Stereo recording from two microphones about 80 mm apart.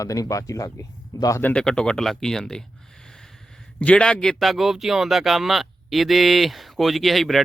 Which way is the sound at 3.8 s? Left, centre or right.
Centre.